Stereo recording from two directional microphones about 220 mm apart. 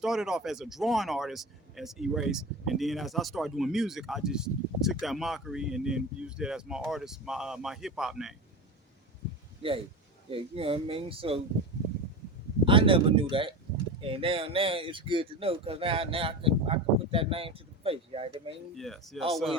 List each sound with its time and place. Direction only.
0.0 s speech: centre (ahead or behind)
10.3 s speech: 25° right (ahead or behind)
12.6 s speech: 25° right (ahead or behind)
18.8 s speech: centre (ahead or behind)